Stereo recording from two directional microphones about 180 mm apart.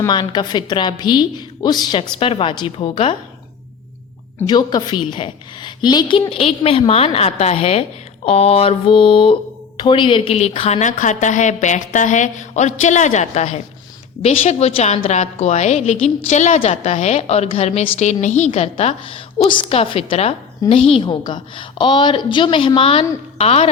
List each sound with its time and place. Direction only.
0.0 s a woman's voice: 25° left (ahead or behind)
4.4 s a woman's voice: 25° left (ahead or behind)